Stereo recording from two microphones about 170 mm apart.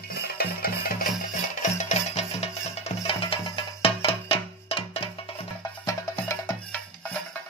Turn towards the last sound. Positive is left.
turn(degrees=15)  # may be behind; listen again after turning